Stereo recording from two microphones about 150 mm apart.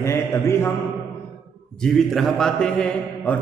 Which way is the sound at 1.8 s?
Centre (ahead or behind).